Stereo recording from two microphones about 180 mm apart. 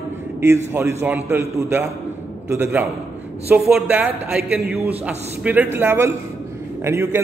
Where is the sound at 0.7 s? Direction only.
15° right (ahead or behind).